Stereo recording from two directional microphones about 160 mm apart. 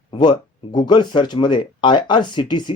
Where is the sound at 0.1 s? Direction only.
25° left (ahead or behind).